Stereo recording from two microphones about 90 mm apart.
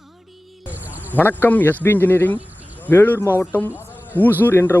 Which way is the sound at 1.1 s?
20° left (ahead or behind).